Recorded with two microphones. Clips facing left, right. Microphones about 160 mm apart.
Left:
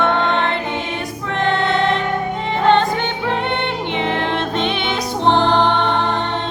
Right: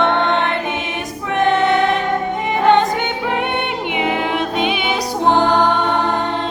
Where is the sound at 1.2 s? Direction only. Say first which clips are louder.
Right 4 dB; 15° right (ahead or behind).